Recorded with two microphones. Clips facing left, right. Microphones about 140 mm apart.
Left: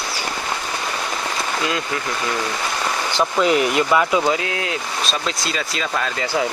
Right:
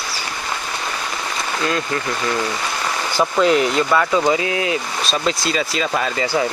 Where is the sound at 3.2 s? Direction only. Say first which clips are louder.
Right 2 dB; centre (ahead or behind).